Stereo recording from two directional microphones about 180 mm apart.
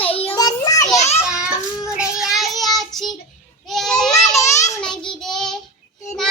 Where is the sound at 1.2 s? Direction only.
5° right (ahead or behind).